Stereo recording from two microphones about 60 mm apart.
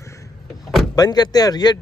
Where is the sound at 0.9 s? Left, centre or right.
Left.